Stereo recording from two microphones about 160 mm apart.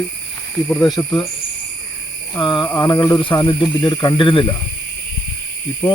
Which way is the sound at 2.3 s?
30° left (ahead or behind).